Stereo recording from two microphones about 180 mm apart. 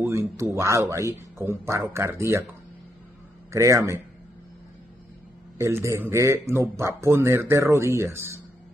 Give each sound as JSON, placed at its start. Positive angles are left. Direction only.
{"t": 0.0, "sound": "a man's voice", "side_deg": -15}
{"t": 3.5, "sound": "a man's voice", "side_deg": -15}
{"t": 5.6, "sound": "a man's voice", "side_deg": -15}